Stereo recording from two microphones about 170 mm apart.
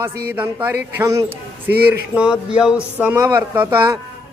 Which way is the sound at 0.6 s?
15° right (ahead or behind).